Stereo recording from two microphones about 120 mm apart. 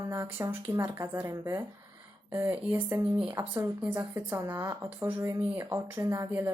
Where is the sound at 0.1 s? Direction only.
20° right (ahead or behind).